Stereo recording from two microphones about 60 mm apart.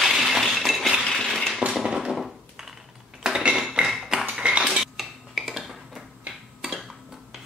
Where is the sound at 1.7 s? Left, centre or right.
Centre.